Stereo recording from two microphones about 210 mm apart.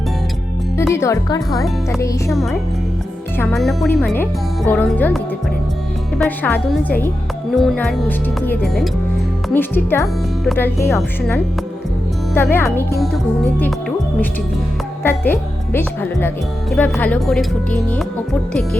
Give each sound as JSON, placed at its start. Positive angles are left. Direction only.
{"t": 0.8, "sound": "speech", "side_deg": 10}
{"t": 2.3, "sound": "speech", "side_deg": 0}
{"t": 15.0, "sound": "speech", "side_deg": 10}